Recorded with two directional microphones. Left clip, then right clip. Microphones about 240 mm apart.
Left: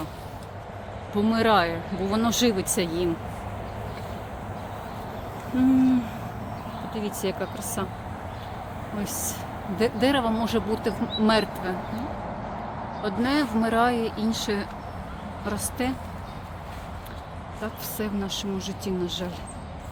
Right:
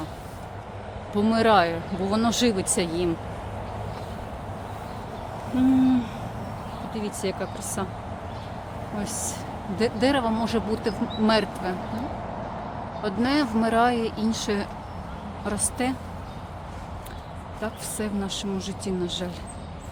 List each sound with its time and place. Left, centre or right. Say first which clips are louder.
1.1 s speech: right 2 dB; centre
6.9 s speech: even; centre
9.7 s speech: even; centre
13.0 s speech: right 1 dB; centre
17.6 s speech: right 1 dB; centre